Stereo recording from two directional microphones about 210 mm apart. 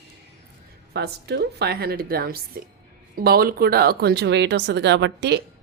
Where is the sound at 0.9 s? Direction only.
50° right (ahead or behind).